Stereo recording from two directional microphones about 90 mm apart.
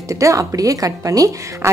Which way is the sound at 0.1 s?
35° right (ahead or behind).